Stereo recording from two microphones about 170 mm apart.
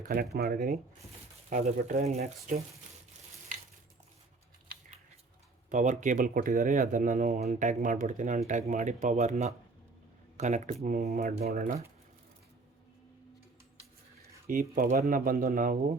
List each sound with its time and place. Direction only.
0.3 s speech: 65° right (ahead or behind)
1.5 s speech: 45° right (ahead or behind)
5.7 s speech: 45° right (ahead or behind)
14.4 s speech: 55° right (ahead or behind)